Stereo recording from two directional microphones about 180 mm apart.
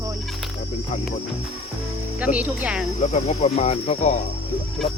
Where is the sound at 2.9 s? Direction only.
40° left (ahead or behind).